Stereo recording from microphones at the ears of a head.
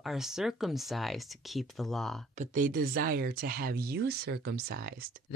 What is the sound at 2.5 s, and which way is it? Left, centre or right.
Speech, right.